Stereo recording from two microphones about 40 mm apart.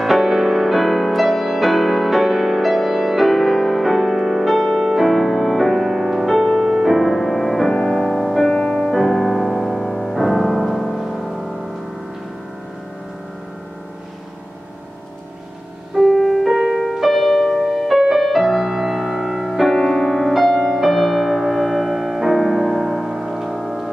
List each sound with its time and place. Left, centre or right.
0.0 s music: centre
7.7 s music: centre
8.9 s music: centre
16.0 s music: centre